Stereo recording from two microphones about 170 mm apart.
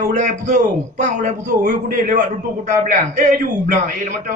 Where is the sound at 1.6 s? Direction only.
65° right (ahead or behind).